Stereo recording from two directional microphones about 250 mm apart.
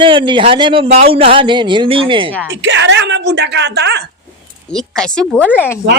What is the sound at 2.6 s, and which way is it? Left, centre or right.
Speech, right.